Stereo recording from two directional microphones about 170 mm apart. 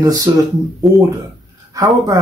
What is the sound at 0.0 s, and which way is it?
Speech, 20° right (ahead or behind).